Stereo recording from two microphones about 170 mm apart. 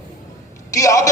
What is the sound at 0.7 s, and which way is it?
Speech, 20° left (ahead or behind).